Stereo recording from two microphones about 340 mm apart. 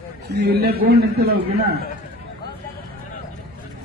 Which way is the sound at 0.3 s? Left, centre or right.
Right.